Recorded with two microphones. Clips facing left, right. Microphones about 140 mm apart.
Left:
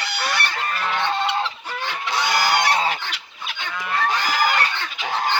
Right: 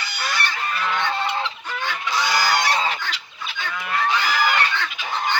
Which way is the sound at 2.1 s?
60° left (ahead or behind).